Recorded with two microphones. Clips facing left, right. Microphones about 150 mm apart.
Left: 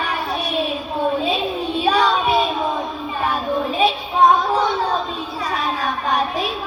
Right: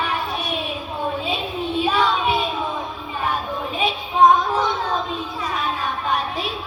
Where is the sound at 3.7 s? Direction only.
35° left (ahead or behind).